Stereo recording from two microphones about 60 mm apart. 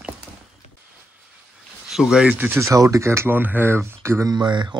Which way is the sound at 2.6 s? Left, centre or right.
Right.